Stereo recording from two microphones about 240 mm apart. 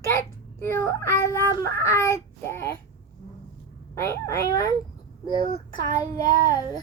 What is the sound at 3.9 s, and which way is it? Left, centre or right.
A child's voice, centre.